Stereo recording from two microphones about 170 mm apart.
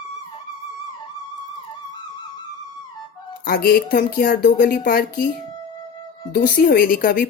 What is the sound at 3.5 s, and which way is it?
Speech, 60° left (ahead or behind).